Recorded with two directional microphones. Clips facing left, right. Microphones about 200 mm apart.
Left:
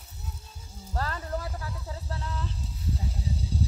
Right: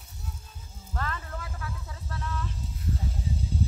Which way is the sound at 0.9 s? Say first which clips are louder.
Left 3 dB; 35° left (ahead or behind).